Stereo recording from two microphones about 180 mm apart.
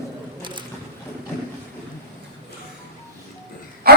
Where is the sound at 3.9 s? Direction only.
55° right (ahead or behind).